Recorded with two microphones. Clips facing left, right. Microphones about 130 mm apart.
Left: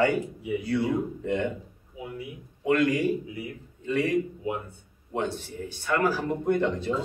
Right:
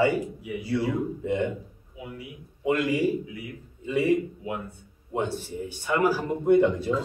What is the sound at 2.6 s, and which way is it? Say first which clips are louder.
A man's voice: left 1 dB; 10° right (ahead or behind).